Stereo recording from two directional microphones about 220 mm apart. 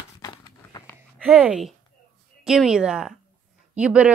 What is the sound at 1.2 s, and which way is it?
Speech, 5° right (ahead or behind).